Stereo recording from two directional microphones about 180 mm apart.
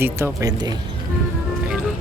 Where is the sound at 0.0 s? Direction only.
20° right (ahead or behind).